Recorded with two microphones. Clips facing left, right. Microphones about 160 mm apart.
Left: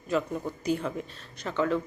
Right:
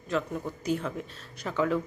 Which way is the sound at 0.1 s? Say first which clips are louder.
Left 2 dB; 5° left (ahead or behind).